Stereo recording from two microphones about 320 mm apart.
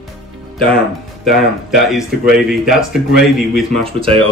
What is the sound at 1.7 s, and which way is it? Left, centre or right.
Speech, centre.